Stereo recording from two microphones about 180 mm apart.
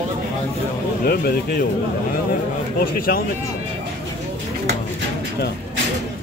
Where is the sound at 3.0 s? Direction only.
55° left (ahead or behind).